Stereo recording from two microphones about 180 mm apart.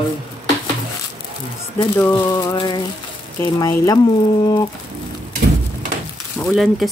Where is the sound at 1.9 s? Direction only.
15° left (ahead or behind).